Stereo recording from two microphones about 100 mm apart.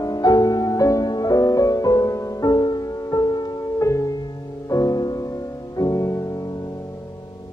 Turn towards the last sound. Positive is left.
turn(degrees=35)  # may be behind; listen again after turning